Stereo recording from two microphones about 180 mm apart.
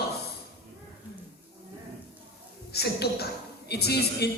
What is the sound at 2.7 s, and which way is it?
A man's voice, 65° left (ahead or behind).